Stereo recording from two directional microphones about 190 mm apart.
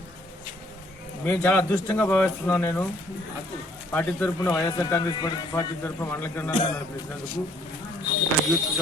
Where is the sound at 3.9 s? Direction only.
10° left (ahead or behind).